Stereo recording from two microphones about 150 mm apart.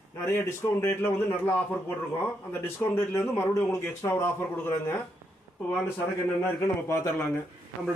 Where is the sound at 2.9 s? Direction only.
20° left (ahead or behind).